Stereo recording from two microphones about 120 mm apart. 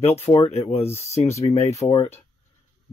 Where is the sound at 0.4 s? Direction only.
60° left (ahead or behind).